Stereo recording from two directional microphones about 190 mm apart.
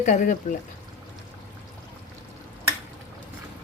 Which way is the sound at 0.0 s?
40° left (ahead or behind).